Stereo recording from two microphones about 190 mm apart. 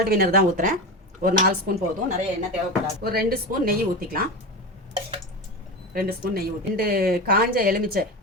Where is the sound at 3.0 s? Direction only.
55° right (ahead or behind).